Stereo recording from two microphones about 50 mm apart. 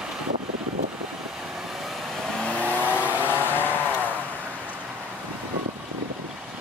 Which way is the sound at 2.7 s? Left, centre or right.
Right.